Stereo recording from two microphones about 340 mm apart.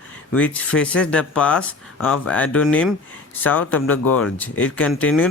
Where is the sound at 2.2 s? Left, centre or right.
Centre.